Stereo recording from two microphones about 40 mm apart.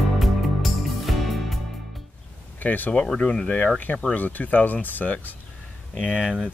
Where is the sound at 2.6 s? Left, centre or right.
Left.